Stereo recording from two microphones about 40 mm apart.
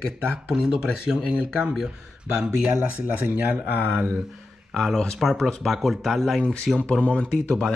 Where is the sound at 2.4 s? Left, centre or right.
Right.